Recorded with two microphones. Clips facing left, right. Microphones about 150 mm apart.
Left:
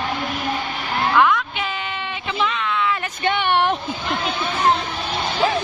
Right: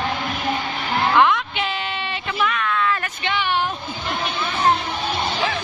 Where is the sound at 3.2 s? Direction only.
60° left (ahead or behind).